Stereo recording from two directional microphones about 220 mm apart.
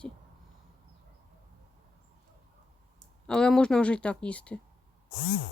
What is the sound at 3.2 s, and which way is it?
Speech, 5° left (ahead or behind).